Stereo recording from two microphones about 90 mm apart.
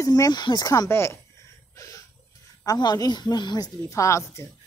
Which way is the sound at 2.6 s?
45° left (ahead or behind).